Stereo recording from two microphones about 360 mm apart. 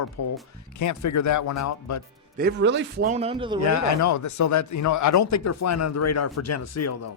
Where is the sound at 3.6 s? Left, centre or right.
Left.